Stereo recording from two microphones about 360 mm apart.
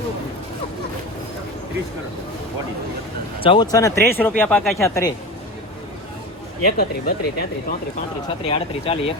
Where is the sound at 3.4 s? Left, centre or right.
Centre.